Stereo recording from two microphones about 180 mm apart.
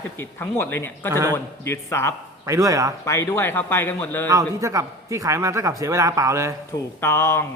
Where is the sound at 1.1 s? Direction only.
15° right (ahead or behind).